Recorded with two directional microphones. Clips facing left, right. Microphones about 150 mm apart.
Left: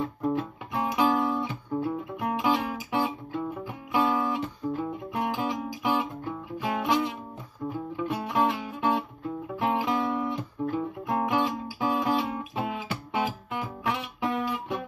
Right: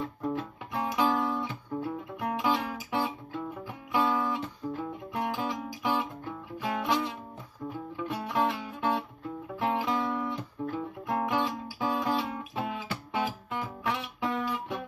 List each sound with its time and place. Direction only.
0.0 s music: 25° left (ahead or behind)